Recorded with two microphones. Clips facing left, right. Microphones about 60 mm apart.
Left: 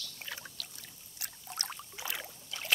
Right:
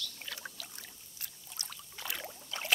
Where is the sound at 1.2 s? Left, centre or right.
Left.